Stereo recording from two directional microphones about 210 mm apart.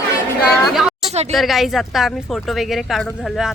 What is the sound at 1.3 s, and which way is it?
Speech, centre (ahead or behind).